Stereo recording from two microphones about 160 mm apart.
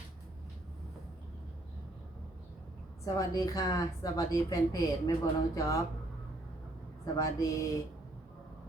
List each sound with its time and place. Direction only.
3.2 s a woman's voice: 20° left (ahead or behind)
7.0 s a woman's voice: 20° left (ahead or behind)